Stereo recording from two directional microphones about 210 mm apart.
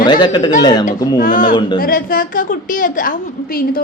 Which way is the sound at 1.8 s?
45° left (ahead or behind).